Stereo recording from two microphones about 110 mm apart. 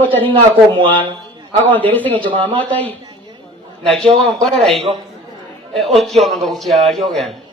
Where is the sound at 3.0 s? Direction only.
45° right (ahead or behind).